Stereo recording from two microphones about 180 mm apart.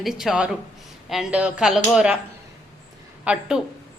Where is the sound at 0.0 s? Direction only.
Centre (ahead or behind).